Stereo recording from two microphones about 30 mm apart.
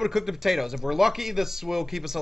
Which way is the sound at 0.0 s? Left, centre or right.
Centre.